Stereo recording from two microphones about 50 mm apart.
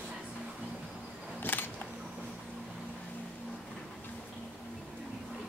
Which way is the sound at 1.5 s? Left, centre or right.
Left.